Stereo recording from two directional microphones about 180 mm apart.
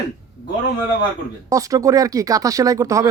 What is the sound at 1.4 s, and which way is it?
Speech, 20° right (ahead or behind).